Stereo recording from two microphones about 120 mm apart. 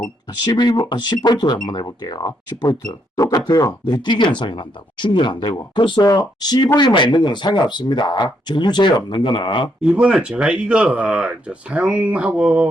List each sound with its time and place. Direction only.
0.4 s speech: 35° left (ahead or behind)
9.8 s speech: 10° right (ahead or behind)